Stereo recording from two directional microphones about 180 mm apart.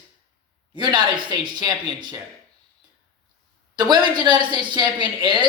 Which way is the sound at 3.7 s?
25° right (ahead or behind).